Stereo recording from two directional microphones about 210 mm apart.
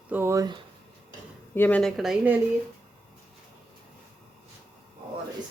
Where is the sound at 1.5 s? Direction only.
10° left (ahead or behind).